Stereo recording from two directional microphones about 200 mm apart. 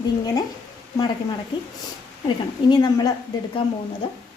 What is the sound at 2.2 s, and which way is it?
Speech, 20° left (ahead or behind).